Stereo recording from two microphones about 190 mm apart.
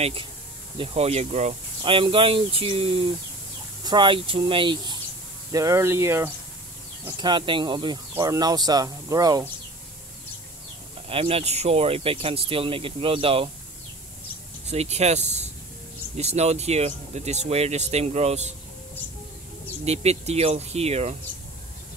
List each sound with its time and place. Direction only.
0.0 s speech: 30° right (ahead or behind)
5.5 s speech: 15° right (ahead or behind)
7.1 s speech: 25° right (ahead or behind)
11.1 s speech: 30° right (ahead or behind)
14.7 s speech: 35° right (ahead or behind)
19.8 s speech: 35° right (ahead or behind)